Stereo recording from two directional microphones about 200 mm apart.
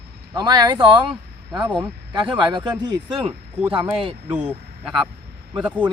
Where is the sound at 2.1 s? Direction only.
20° right (ahead or behind).